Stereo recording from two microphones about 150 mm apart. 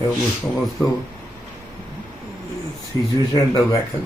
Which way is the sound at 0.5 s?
Centre (ahead or behind).